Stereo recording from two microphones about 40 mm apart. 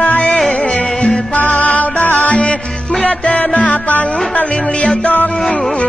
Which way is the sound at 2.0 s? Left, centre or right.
Left.